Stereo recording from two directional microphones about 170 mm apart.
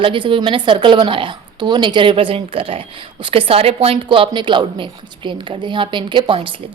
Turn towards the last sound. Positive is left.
turn(degrees=-30)  # may be behind; listen again after turning